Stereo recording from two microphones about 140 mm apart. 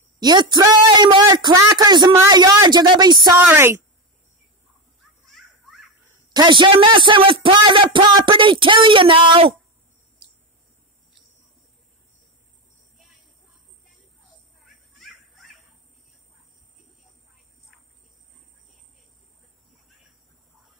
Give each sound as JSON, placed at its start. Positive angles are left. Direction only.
{"t": 0.2, "sound": "speech", "side_deg": -30}
{"t": 3.4, "sound": "a woman's voice", "side_deg": -15}
{"t": 5.2, "sound": "children playing", "side_deg": 0}
{"t": 6.3, "sound": "speech", "side_deg": -35}
{"t": 14.6, "sound": "dog", "side_deg": 0}